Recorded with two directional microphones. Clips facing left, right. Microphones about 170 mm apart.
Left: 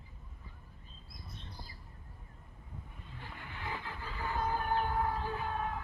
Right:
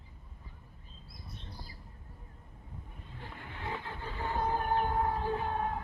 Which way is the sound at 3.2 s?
35° right (ahead or behind).